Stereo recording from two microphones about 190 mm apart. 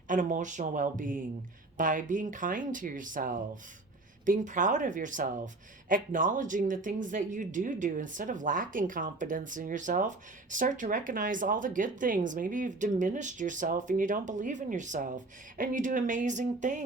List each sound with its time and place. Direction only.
0.1 s speech: 45° right (ahead or behind)